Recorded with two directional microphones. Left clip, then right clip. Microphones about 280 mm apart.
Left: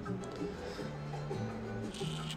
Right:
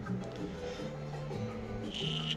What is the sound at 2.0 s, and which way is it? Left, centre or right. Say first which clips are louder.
Music: right 6 dB; centre.